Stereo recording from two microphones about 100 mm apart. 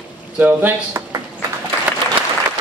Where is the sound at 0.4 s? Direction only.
20° right (ahead or behind).